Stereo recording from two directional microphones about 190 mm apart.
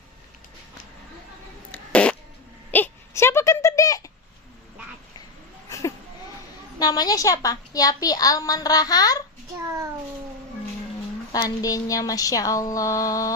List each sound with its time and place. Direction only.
1.7 s fart: 5° left (ahead or behind)
2.7 s a sound: 10° left (ahead or behind)
5.6 s a sound: 15° left (ahead or behind)
6.7 s a woman's voice: 20° left (ahead or behind)
9.6 s a child's voice: 15° right (ahead or behind)
11.3 s a woman's voice: 20° left (ahead or behind)